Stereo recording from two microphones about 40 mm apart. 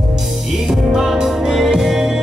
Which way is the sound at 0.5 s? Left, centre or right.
Centre.